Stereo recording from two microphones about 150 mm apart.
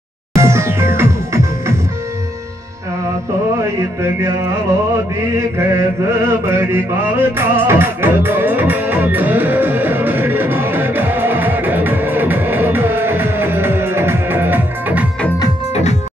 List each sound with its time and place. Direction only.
0.4 s music: 20° right (ahead or behind)
5.6 s music: 20° right (ahead or behind)
15.7 s music: 50° left (ahead or behind)